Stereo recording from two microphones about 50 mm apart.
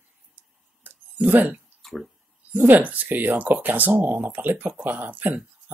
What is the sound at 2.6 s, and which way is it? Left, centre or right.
Speech, right.